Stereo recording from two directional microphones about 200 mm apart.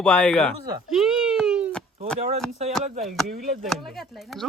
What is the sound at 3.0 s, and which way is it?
A man's voice, centre (ahead or behind).